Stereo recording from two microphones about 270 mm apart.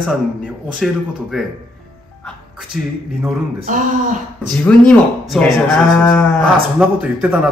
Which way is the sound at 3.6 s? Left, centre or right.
Right.